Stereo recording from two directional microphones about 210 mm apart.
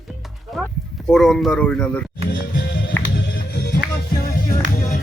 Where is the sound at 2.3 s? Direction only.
45° left (ahead or behind).